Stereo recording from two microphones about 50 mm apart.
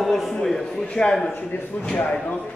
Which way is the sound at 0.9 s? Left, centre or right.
Centre.